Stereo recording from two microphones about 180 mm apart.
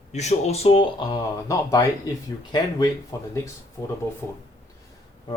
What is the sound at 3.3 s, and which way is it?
Speech, 15° left (ahead or behind).